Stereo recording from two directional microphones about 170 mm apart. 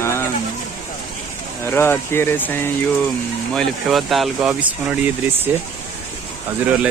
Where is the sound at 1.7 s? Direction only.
15° left (ahead or behind).